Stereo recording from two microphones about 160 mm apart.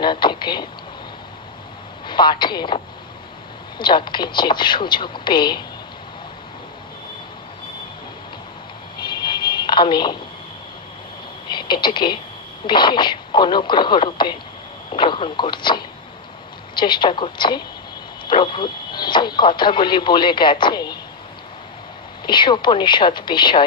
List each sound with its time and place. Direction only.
0.0 s speech: 30° left (ahead or behind)
2.0 s speech: 30° left (ahead or behind)
9.0 s a sound: 30° left (ahead or behind)
11.5 s speech: 30° left (ahead or behind)
22.2 s speech: 30° left (ahead or behind)